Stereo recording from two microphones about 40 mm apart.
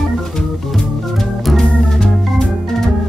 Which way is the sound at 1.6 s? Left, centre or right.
Centre.